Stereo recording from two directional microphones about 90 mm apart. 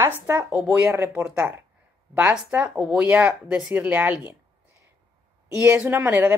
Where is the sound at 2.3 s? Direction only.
10° right (ahead or behind).